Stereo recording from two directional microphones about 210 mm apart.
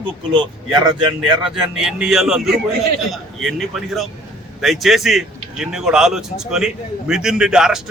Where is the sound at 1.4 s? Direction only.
5° right (ahead or behind).